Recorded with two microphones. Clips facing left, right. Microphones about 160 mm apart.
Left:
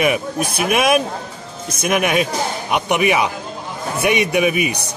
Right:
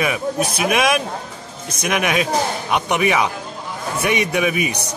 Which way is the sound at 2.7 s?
55° left (ahead or behind).